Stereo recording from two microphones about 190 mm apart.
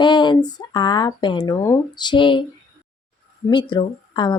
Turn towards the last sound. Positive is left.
turn(degrees=25)  # may be behind; listen again after turning